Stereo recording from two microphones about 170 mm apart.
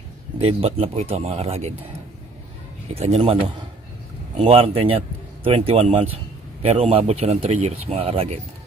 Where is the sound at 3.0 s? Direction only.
35° right (ahead or behind).